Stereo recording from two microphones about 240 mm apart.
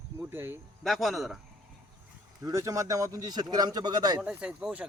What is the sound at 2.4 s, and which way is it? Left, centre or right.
Speech, centre.